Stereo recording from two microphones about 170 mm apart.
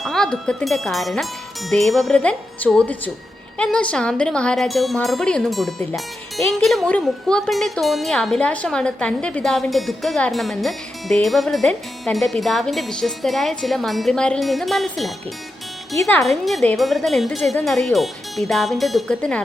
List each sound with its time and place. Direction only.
0.0 s speech: 5° left (ahead or behind)